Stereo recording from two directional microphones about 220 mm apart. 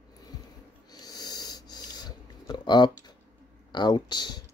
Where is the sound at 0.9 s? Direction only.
20° left (ahead or behind).